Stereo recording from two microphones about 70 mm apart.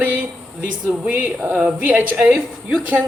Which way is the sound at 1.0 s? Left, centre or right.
Right.